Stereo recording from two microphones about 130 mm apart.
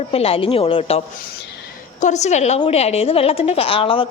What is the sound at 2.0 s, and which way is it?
A woman's voice, 65° left (ahead or behind).